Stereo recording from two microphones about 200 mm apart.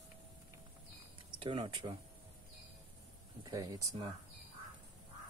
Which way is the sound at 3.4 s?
20° right (ahead or behind).